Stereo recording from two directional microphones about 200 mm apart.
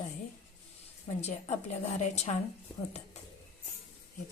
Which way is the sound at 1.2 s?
35° left (ahead or behind).